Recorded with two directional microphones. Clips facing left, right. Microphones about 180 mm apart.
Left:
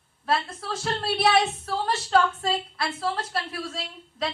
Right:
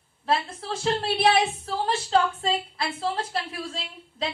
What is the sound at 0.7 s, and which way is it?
A woman's voice, 25° right (ahead or behind).